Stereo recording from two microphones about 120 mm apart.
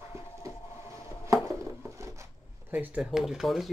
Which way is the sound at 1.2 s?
25° right (ahead or behind).